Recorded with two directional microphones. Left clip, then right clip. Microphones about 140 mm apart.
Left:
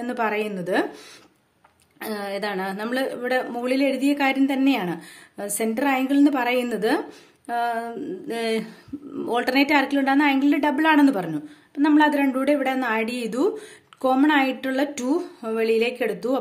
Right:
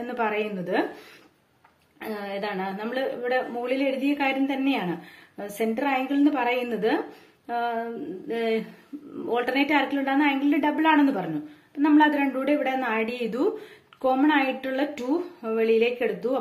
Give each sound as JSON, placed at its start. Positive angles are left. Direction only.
{"t": 0.0, "sound": "a woman's voice", "side_deg": 35}
{"t": 2.0, "sound": "a woman's voice", "side_deg": 35}